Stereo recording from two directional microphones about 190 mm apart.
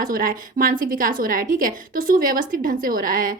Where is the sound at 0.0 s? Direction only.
45° right (ahead or behind).